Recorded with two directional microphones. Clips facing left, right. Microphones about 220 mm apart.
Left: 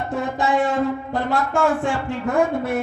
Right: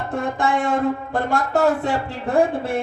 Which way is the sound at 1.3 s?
40° right (ahead or behind).